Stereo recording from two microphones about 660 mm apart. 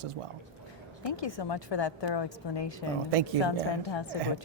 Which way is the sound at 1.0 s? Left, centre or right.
Left.